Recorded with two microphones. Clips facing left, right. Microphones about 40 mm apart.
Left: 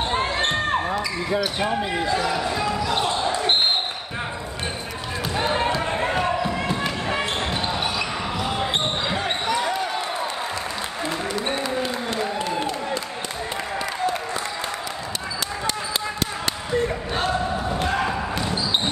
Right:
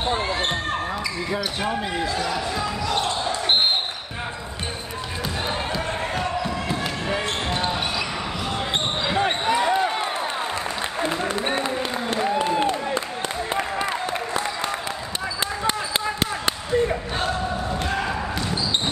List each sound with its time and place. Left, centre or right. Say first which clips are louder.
0.4 s basketball bounce: left 3 dB; centre
11.6 s applause: even; right